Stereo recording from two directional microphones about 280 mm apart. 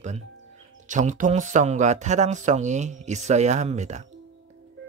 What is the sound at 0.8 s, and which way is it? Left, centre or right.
Speech, right.